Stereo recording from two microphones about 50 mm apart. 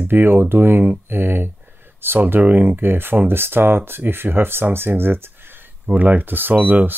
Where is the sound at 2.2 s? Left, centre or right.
Right.